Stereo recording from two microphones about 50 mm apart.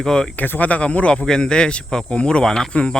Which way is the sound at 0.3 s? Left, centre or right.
Left.